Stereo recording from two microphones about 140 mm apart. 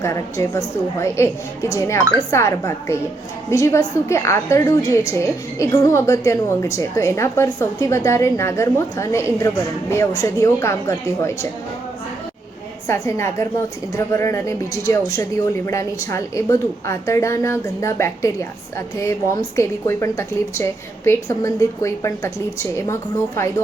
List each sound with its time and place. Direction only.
0.0 s a woman's voice: 20° left (ahead or behind)
12.9 s a woman's voice: 20° left (ahead or behind)